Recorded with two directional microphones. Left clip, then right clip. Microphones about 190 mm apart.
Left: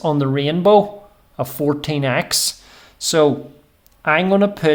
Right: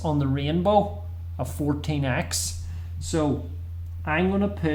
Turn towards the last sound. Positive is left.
turn(degrees=50)  # may be behind; listen again after turning